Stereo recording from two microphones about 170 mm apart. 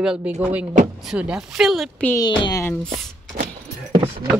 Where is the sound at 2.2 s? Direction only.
25° left (ahead or behind).